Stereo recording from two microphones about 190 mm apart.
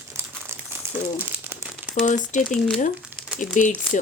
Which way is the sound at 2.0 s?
40° left (ahead or behind).